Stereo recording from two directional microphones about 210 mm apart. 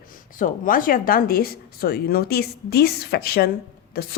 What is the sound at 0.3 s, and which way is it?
A woman's voice, 40° left (ahead or behind).